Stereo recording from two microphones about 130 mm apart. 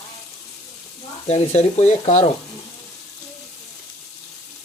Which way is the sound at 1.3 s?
55° left (ahead or behind).